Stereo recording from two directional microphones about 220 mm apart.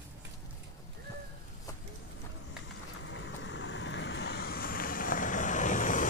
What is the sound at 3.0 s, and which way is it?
Vehicle, 55° left (ahead or behind).